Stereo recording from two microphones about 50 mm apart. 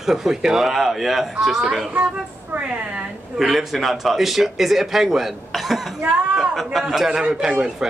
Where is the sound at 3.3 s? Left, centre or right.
Centre.